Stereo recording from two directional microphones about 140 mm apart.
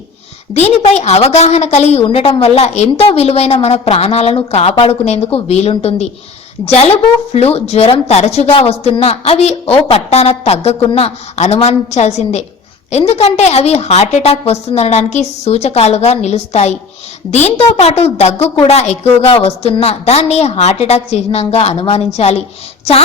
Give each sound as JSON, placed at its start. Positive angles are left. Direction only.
{"t": 0.5, "sound": "a woman's voice", "side_deg": 50}